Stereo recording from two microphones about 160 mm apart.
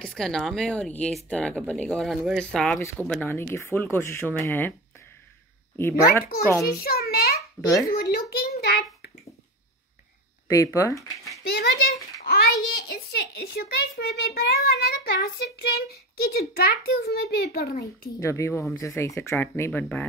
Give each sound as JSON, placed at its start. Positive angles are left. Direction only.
{"t": 0.0, "sound": "speech", "side_deg": 5}
{"t": 6.7, "sound": "a sound", "side_deg": 70}
{"t": 10.5, "sound": "speech", "side_deg": 20}
{"t": 11.4, "sound": "a child's voice", "side_deg": 85}
{"t": 18.2, "sound": "speech", "side_deg": 15}